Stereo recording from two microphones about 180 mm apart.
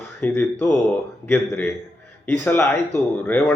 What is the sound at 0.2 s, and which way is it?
Speech, 10° left (ahead or behind).